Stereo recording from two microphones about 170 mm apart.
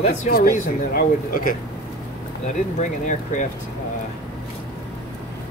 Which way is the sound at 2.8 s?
45° left (ahead or behind).